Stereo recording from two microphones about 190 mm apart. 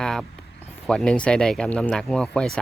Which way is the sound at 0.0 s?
Centre (ahead or behind).